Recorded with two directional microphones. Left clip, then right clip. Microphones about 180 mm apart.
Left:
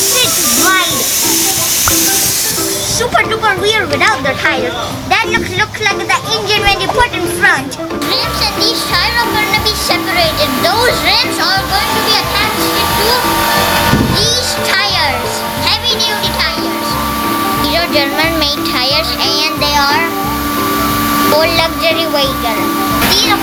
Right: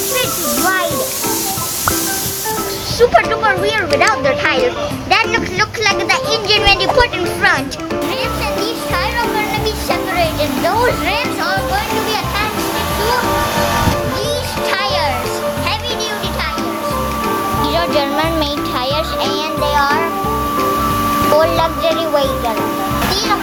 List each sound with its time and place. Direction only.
3.2 s a child's voice: 30° right (ahead or behind)
5.1 s a child's voice: 45° right (ahead or behind)
9.5 s music: 15° right (ahead or behind)
10.7 s speech: 15° right (ahead or behind)
14.7 s music: 15° right (ahead or behind)
17.7 s music: 15° right (ahead or behind)
18.9 s a child's voice: 15° right (ahead or behind)
21.3 s speech: 15° right (ahead or behind)